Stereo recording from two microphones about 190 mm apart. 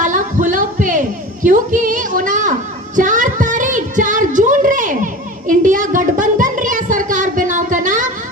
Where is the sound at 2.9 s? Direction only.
40° right (ahead or behind).